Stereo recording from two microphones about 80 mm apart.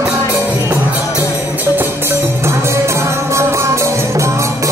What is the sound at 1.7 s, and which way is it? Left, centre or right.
Music, right.